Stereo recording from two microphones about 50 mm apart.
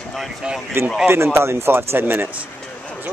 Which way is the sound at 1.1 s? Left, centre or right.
Right.